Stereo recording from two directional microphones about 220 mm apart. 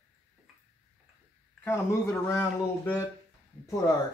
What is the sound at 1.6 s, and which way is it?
Speech, 10° left (ahead or behind).